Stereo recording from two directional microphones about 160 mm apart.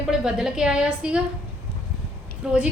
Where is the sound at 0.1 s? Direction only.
5° right (ahead or behind).